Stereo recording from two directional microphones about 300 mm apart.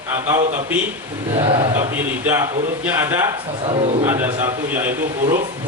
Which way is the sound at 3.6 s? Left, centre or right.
Centre.